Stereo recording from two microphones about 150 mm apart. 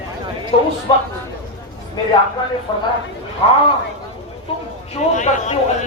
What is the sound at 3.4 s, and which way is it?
Speech, 40° left (ahead or behind).